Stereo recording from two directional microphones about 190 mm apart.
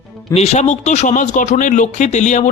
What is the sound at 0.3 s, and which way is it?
Speech, 35° left (ahead or behind).